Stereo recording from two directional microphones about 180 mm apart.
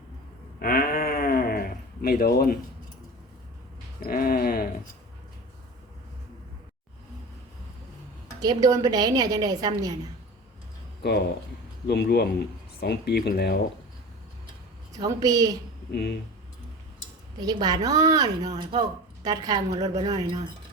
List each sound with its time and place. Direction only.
0.6 s a sound: 55° left (ahead or behind)
4.0 s speech: 55° left (ahead or behind)
8.4 s speech: 20° right (ahead or behind)
11.9 s speech: 65° left (ahead or behind)
14.9 s speech: 20° right (ahead or behind)
15.9 s speech: 65° left (ahead or behind)
17.4 s speech: 20° right (ahead or behind)